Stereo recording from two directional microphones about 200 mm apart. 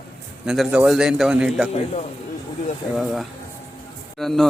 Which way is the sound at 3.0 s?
Centre (ahead or behind).